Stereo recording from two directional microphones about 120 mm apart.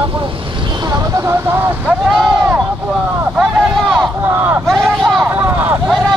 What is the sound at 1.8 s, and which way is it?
Speech, 5° right (ahead or behind).